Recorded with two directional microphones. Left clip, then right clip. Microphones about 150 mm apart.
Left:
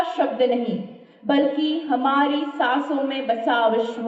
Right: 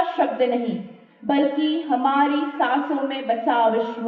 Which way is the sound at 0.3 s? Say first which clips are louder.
Left 1 dB; 50° left (ahead or behind).